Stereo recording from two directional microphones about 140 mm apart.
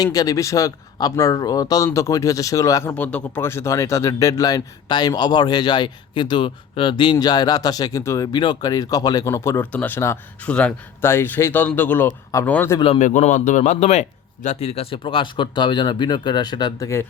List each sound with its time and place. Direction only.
0.0 s speech: 25° left (ahead or behind)
3.0 s speech: 10° left (ahead or behind)
12.5 s speech: 10° left (ahead or behind)
13.0 s speech: 60° left (ahead or behind); by 16.9 s 30° left (ahead or behind)